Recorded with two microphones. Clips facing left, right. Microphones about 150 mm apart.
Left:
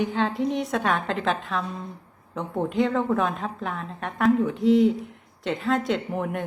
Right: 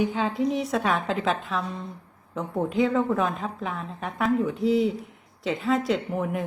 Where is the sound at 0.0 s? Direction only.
Centre (ahead or behind).